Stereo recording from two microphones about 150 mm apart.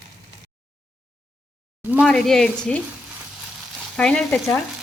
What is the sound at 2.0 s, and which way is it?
Speech, centre (ahead or behind).